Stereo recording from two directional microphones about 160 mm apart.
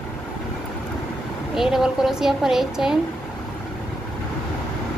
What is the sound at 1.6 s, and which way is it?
Speech, 5° right (ahead or behind).